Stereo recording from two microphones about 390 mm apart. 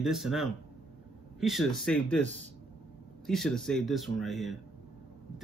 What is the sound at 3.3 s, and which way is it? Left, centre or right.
Speech, centre.